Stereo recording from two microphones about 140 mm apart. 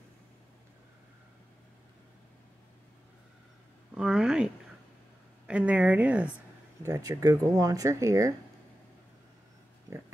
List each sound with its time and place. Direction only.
3.9 s speech: 5° right (ahead or behind)
5.5 s a woman's voice: 10° right (ahead or behind)
6.8 s speech: 25° right (ahead or behind)
9.8 s a sound: 20° right (ahead or behind)